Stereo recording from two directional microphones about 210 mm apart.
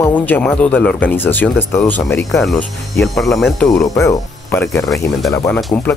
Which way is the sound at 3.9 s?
15° left (ahead or behind).